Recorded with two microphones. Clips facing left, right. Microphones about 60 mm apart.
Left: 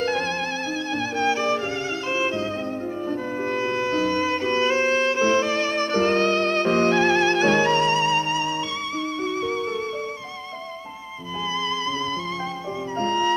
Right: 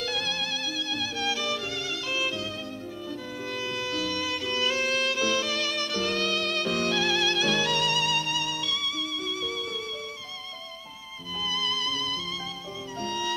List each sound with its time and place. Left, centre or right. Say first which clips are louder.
0.9 s music: left 9 dB; left
2.1 s violin: left 6 dB; left
3.1 s music: left 9 dB; left
13.0 s music: left 9 dB; left